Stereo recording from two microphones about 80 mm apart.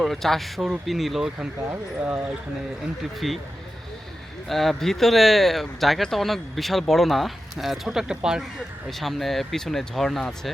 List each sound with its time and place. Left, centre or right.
0.0 s speech: centre
1.7 s speech: right
3.2 s speech: centre
4.4 s speech: centre
8.9 s speech: centre